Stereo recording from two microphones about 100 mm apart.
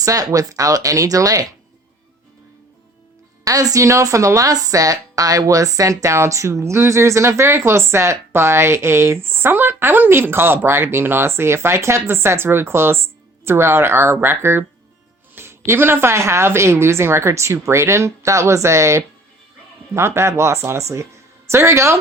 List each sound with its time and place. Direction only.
0.0 s speech: 35° right (ahead or behind)
3.4 s speech: 35° right (ahead or behind)